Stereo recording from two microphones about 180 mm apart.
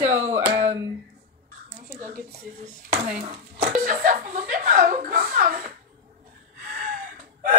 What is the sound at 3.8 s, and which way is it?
Speech, 50° right (ahead or behind).